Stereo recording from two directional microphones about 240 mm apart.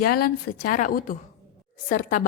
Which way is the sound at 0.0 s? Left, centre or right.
Left.